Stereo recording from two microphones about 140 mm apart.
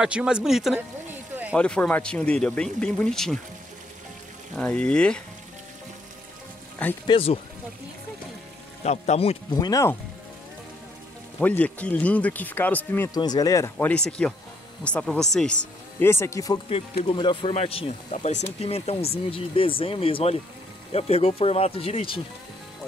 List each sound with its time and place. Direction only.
0.0 s a man's voice: 5° right (ahead or behind)
1.6 s speech: 10° left (ahead or behind)
4.6 s speech: 10° left (ahead or behind)
7.1 s speech: 40° left (ahead or behind)
8.8 s speech: 50° left (ahead or behind)
9.5 s speech: 25° left (ahead or behind)
11.3 s speech: 10° left (ahead or behind)
13.1 s speech: 30° left (ahead or behind)
13.7 s speech: 10° left (ahead or behind)
16.1 s speech: 20° left (ahead or behind)
17.0 s speech: 35° left (ahead or behind)